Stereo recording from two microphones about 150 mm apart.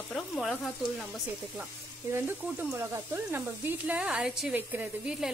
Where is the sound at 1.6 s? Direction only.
15° right (ahead or behind).